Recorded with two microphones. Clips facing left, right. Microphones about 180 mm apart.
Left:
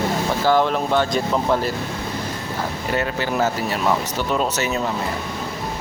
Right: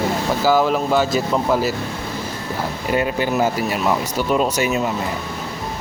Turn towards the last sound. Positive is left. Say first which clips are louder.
# right 3 dB
turn(degrees=-10)  # may be behind; listen again after turning